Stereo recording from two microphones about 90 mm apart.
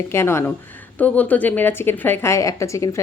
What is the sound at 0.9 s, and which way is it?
A woman's voice, 15° left (ahead or behind).